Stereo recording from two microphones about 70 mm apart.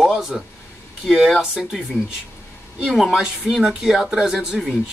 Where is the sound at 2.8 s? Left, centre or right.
Centre.